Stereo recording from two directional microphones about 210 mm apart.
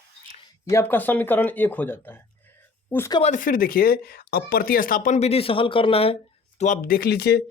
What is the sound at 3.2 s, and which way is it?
Speech, 35° left (ahead or behind).